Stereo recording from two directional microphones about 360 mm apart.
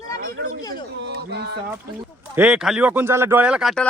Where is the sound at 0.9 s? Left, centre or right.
Right.